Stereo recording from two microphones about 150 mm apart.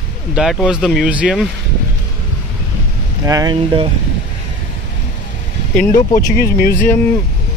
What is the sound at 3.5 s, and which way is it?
Speech, 35° right (ahead or behind).